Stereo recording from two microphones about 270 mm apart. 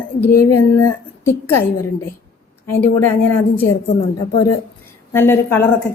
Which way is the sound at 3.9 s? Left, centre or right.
Left.